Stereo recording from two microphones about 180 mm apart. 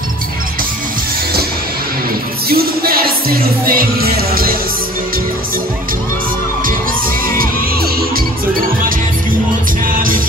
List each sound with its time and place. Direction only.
2.5 s music: 55° right (ahead or behind)
9.8 s music: 50° right (ahead or behind)